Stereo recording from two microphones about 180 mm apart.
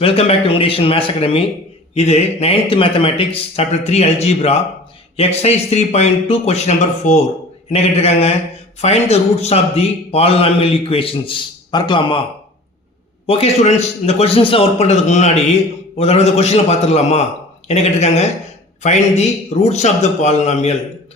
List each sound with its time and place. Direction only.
0.0 s a man's voice: 30° left (ahead or behind)
13.2 s a man's voice: 35° left (ahead or behind)